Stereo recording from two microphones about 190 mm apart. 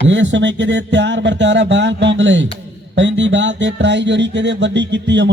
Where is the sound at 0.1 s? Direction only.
70° right (ahead or behind).